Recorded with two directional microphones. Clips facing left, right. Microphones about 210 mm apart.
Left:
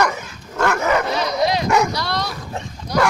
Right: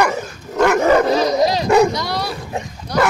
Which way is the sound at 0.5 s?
20° right (ahead or behind).